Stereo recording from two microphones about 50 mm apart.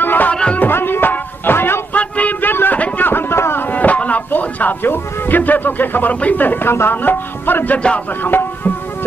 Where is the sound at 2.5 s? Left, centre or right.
Left.